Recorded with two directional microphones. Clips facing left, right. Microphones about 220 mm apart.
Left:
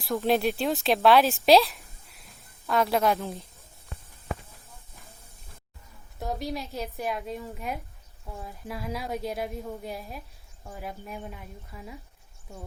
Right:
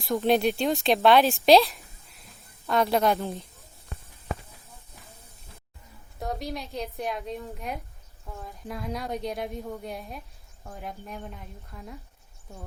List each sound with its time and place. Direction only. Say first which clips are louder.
0.0 s a woman's voice: right 2 dB; centre (ahead or behind)
6.1 s a woman's voice: left 1 dB; centre (ahead or behind)